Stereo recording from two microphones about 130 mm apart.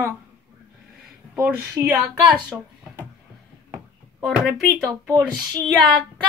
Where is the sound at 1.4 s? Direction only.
20° right (ahead or behind).